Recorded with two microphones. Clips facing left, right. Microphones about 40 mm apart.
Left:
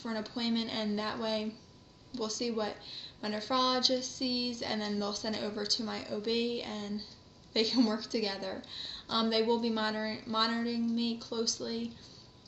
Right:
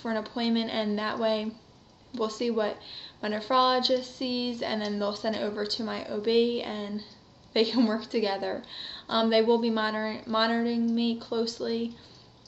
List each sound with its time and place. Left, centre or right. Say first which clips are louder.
0.0 s a woman's voice: right 6 dB; right